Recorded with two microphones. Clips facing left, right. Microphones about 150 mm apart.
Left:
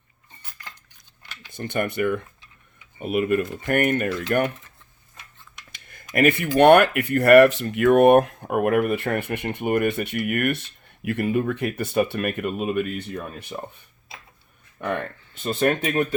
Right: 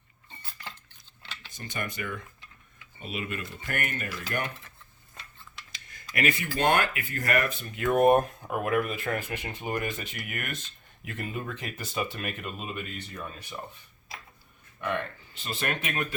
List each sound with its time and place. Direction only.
1.5 s speech: 60° left (ahead or behind)
5.7 s computer keyboard: 55° left (ahead or behind)
6.1 s speech: 55° left (ahead or behind)
6.6 s speech: 65° left (ahead or behind)
15.4 s speech: 45° left (ahead or behind)